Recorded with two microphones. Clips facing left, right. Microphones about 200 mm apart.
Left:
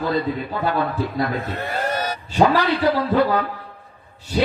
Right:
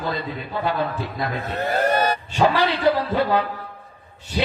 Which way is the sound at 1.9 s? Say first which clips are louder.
Right 5 dB; 55° right (ahead or behind).